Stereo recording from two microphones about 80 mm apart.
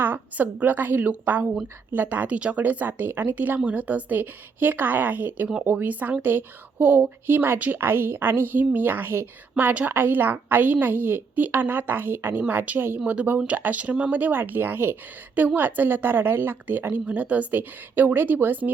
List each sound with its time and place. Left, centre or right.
0.0 s a woman's voice: right